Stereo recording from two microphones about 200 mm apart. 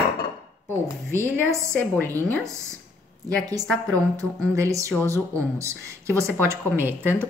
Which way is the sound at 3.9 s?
15° right (ahead or behind).